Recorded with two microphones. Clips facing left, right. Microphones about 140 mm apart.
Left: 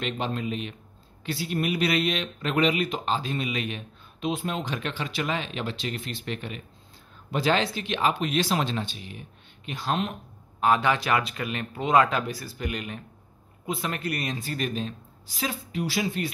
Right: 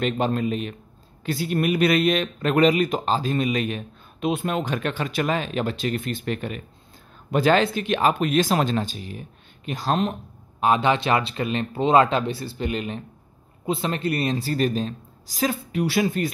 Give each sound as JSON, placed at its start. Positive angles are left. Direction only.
{"t": 0.0, "sound": "speech", "side_deg": -45}
{"t": 4.3, "sound": "a woman's voice", "side_deg": -60}
{"t": 10.6, "sound": "a woman's voice", "side_deg": -20}
{"t": 15.7, "sound": "speech", "side_deg": -60}